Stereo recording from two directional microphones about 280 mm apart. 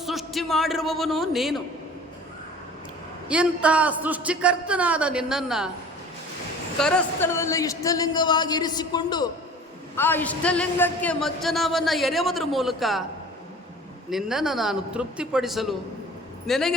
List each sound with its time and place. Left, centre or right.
0.0 s a man's voice: centre
3.2 s a man's voice: centre
6.7 s a man's voice: centre
14.1 s a man's voice: centre